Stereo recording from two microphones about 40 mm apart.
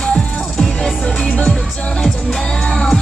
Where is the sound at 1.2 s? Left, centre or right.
Left.